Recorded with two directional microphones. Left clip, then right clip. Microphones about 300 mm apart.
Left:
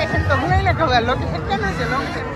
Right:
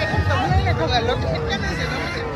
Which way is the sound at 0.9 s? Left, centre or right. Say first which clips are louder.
Left 3 dB; centre.